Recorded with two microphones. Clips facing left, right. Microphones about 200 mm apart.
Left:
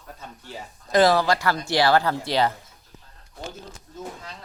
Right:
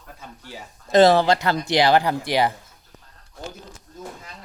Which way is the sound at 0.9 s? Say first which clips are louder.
Right 4 dB; 25° right (ahead or behind).